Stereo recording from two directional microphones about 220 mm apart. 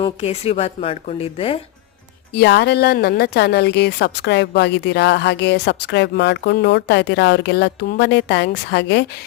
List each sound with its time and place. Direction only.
0.0 s a woman's voice: 25° left (ahead or behind)
2.3 s speech: 50° left (ahead or behind)